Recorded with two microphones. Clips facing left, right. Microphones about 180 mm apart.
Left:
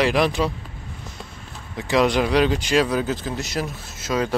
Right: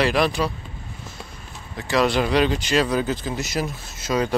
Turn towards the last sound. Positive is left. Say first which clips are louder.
# right 1 dB
turn(degrees=0)  # may be behind; listen again after turning